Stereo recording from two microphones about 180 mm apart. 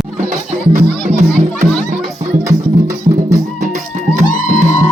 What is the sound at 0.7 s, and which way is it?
Music, 40° right (ahead or behind).